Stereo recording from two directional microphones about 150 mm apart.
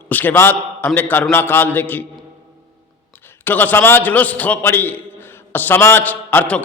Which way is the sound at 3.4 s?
15° left (ahead or behind).